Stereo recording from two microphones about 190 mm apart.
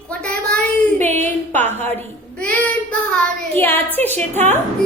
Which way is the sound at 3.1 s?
10° left (ahead or behind).